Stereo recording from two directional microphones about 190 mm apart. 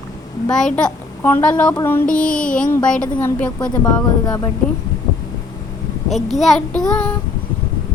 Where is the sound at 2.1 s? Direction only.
5° left (ahead or behind).